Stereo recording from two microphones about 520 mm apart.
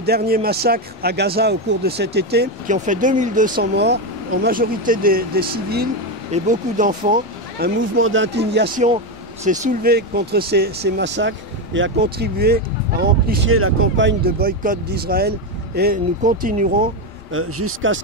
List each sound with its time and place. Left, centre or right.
0.0 s speech: centre